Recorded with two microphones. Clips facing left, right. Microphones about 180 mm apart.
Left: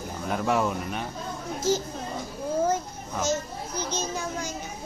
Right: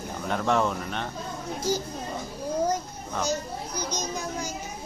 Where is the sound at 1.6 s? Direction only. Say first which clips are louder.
Left 3 dB; 15° right (ahead or behind).